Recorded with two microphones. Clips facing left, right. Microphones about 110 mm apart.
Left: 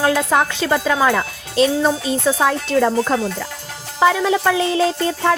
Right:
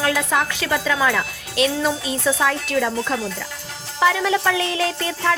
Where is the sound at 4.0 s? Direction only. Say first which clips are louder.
Left 3 dB; 25° left (ahead or behind).